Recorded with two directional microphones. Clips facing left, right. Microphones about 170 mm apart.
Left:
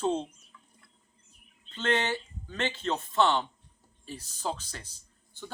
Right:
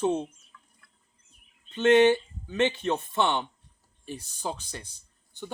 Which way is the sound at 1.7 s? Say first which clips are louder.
Right 10 dB; 15° right (ahead or behind).